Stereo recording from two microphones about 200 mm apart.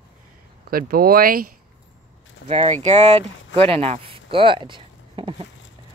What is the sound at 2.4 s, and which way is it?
Speech, 35° right (ahead or behind).